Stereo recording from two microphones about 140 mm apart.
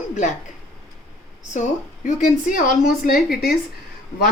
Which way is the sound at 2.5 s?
85° left.